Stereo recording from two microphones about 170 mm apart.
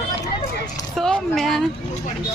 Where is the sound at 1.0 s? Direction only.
Centre (ahead or behind).